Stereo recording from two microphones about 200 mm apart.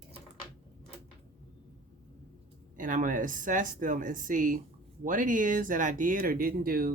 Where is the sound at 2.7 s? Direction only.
40° right (ahead or behind).